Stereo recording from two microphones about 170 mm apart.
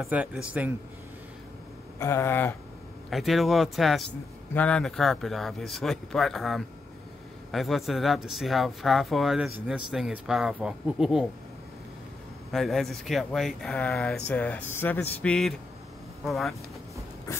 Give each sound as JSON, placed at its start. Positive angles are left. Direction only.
{"t": 0.0, "sound": "speech", "side_deg": -5}
{"t": 2.0, "sound": "speech", "side_deg": 15}
{"t": 3.1, "sound": "speech", "side_deg": 0}
{"t": 12.5, "sound": "speech", "side_deg": 0}